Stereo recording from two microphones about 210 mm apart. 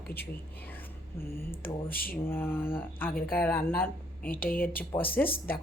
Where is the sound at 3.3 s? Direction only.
10° left (ahead or behind).